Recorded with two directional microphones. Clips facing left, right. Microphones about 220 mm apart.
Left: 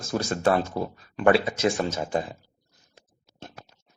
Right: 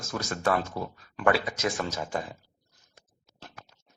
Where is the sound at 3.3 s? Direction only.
25° left (ahead or behind).